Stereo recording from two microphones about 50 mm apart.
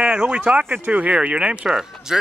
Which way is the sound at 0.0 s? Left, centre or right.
Right.